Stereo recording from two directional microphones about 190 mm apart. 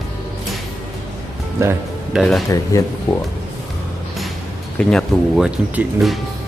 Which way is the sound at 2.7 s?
15° left (ahead or behind).